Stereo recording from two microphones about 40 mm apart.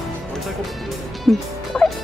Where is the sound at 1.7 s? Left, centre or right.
Centre.